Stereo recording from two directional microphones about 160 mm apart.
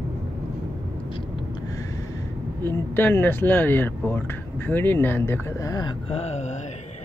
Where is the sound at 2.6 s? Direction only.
15° left (ahead or behind); by 6.6 s 45° left (ahead or behind).